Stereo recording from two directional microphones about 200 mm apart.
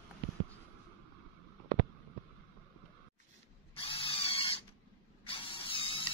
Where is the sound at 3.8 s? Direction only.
25° left (ahead or behind).